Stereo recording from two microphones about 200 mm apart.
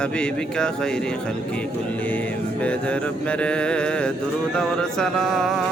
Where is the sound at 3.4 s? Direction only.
5° left (ahead or behind).